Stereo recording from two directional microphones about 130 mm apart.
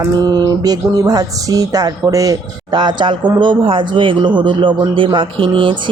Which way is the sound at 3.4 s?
40° right (ahead or behind).